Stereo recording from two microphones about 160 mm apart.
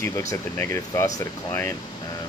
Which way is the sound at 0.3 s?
15° left (ahead or behind).